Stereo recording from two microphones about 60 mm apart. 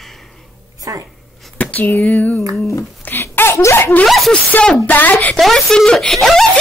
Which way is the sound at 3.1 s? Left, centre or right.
Left.